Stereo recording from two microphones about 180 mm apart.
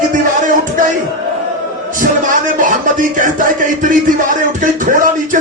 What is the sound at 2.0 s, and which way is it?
Music, 45° right (ahead or behind).